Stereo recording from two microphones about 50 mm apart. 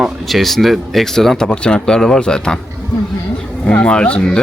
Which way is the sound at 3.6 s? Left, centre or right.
Left.